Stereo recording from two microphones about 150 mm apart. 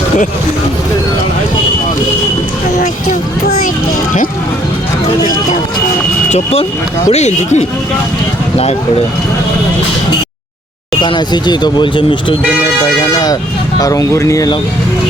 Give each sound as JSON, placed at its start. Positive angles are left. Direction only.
{"t": 6.3, "sound": "speech", "side_deg": 40}
{"t": 11.0, "sound": "speech", "side_deg": 30}